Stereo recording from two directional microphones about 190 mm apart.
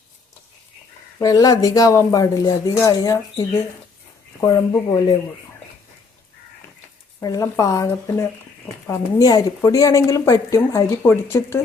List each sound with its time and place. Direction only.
1.2 s speech: 20° left (ahead or behind)
7.2 s speech: 20° left (ahead or behind)